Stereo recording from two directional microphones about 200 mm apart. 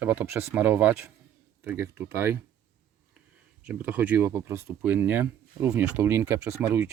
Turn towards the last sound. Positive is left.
turn(degrees=-10)  # may be behind; listen again after turning